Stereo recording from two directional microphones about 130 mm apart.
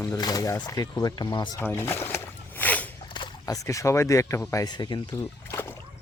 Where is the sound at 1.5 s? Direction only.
20° left (ahead or behind).